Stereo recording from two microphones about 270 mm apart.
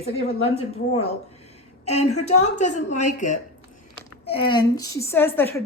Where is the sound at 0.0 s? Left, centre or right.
Left.